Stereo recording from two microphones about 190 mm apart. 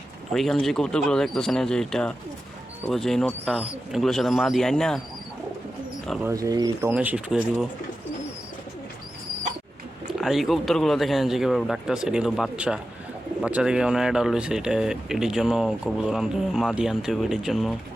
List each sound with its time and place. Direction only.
0.3 s speech: centre (ahead or behind)
6.2 s speech: 15° right (ahead or behind)
6.9 s speech: 5° right (ahead or behind)
10.1 s speech: centre (ahead or behind)